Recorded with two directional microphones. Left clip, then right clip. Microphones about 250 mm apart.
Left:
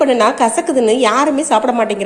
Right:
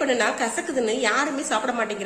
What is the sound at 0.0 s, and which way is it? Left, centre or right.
A woman's voice, left.